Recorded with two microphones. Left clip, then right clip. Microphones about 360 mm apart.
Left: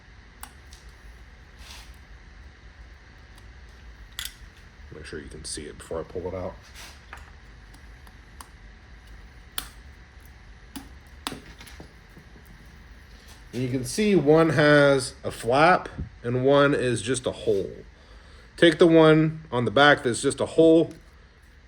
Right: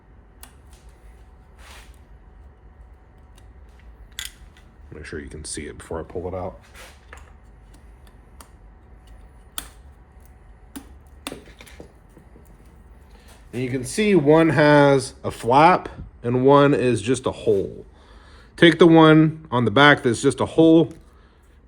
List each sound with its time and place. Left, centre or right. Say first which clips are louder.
5.4 s speech: right 3 dB; centre
13.6 s speech: right 3 dB; right
14.3 s speech: right 3 dB; centre
18.5 s speech: right 4 dB; centre